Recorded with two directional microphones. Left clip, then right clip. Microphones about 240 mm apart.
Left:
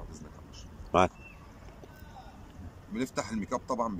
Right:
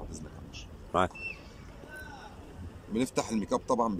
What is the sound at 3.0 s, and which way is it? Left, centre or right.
Speech, centre.